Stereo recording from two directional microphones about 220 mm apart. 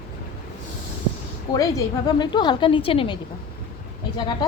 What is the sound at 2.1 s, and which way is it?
A woman's voice, 20° left (ahead or behind).